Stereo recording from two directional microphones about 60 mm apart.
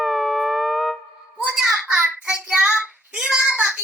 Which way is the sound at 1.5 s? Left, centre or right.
Centre.